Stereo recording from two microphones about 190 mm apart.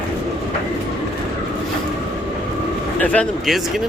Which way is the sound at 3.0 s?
5° left (ahead or behind).